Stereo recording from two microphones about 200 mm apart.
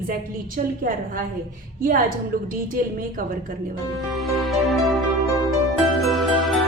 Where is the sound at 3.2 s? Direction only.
45° right (ahead or behind).